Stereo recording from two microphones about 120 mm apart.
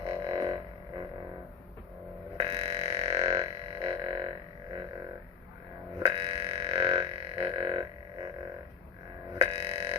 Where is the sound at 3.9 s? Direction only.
40° right (ahead or behind).